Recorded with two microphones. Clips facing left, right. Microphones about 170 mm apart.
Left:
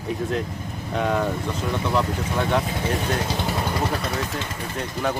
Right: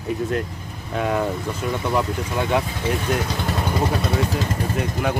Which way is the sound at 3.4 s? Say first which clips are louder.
Right 1 dB; 5° left (ahead or behind).